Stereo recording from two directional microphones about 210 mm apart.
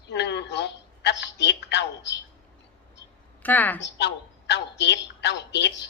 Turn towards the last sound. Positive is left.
turn(degrees=55)  # may be behind; listen again after turning